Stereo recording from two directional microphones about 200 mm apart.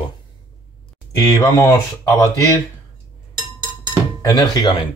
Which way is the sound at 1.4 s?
15° left (ahead or behind).